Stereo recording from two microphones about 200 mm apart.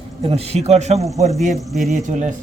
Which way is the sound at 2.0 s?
35° right (ahead or behind).